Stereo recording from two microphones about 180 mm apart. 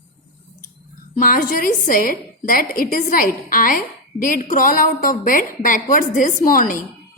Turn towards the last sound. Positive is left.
turn(degrees=50)  # may be behind; listen again after turning